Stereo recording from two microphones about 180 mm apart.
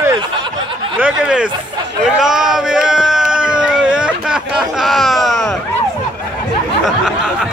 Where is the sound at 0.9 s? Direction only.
5° right (ahead or behind).